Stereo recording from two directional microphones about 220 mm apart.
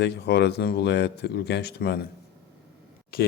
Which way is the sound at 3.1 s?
45° left (ahead or behind).